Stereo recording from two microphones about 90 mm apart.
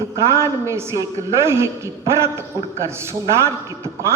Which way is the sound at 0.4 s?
30° right (ahead or behind).